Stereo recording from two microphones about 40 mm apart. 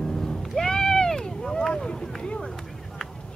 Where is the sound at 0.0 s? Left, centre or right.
Centre.